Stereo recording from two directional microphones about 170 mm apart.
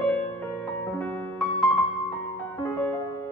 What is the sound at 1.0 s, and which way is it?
Music, 5° left (ahead or behind).